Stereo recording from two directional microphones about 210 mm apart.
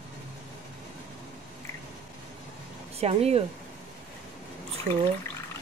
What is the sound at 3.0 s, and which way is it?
Speech, 30° right (ahead or behind).